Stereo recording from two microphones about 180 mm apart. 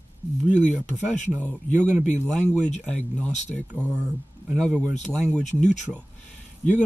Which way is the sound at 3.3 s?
40° left (ahead or behind).